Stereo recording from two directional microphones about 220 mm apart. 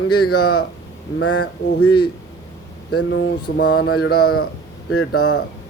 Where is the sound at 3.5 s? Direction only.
50° left (ahead or behind).